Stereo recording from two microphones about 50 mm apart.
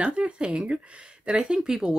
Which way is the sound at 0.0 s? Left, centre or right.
Right.